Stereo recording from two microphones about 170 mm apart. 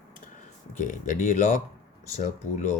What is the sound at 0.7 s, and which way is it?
Speech, 50° left (ahead or behind).